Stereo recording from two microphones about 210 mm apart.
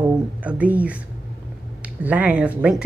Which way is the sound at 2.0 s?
5° right (ahead or behind).